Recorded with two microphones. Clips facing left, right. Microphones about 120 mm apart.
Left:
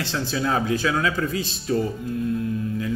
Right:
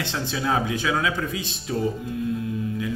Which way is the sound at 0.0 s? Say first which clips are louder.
Left 2 dB; 20° right (ahead or behind).